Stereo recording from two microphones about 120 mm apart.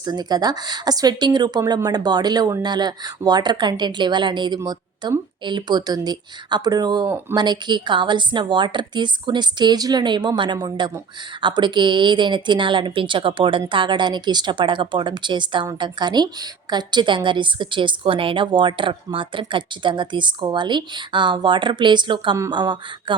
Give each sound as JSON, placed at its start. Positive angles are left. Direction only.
{"t": 0.0, "sound": "a woman's voice", "side_deg": -35}